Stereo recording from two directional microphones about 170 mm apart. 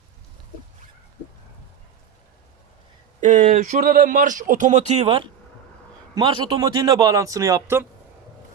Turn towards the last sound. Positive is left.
turn(degrees=-15)  # may be behind; listen again after turning